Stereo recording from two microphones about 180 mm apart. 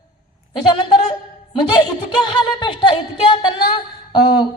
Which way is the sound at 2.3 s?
25° left (ahead or behind).